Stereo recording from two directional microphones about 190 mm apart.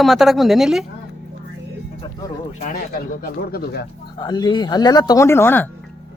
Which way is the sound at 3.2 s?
55° left (ahead or behind).